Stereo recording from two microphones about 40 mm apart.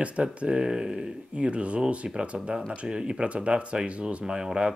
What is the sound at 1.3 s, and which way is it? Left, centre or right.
Speech, right.